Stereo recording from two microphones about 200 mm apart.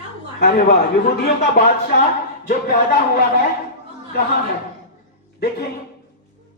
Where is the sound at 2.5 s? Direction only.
45° left (ahead or behind).